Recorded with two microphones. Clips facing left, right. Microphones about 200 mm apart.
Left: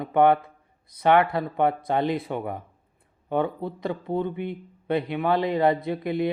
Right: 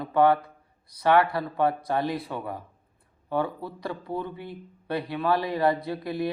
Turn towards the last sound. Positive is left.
turn(degrees=20)  # may be behind; listen again after turning